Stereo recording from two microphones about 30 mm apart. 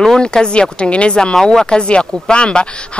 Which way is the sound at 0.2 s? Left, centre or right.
Left.